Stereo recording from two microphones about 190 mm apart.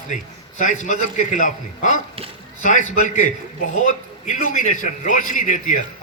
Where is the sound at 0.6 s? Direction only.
40° left (ahead or behind).